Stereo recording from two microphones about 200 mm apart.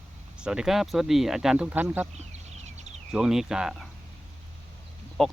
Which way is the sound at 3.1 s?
Centre (ahead or behind).